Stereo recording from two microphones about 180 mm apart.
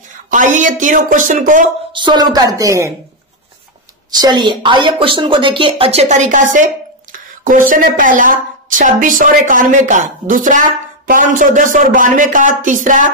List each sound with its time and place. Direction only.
0.3 s speech: 45° right (ahead or behind)
1.9 s speech: 25° right (ahead or behind)
4.1 s speech: 25° right (ahead or behind); by 13.1 s 45° right (ahead or behind)